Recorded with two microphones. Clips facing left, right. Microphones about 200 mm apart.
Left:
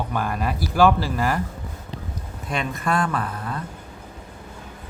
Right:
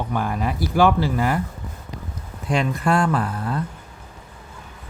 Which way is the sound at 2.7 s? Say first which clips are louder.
Right 2 dB; 30° right (ahead or behind).